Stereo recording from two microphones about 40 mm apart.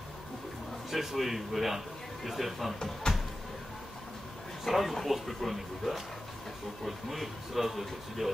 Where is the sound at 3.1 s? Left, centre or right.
Left.